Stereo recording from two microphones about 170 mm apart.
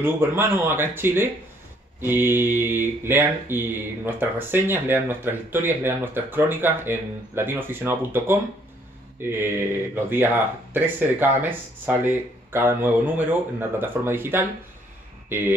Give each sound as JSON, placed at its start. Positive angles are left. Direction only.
{"t": 0.0, "sound": "speech", "side_deg": -15}